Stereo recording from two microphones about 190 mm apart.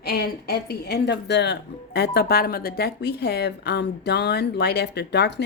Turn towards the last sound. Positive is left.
turn(degrees=60)  # may be behind; listen again after turning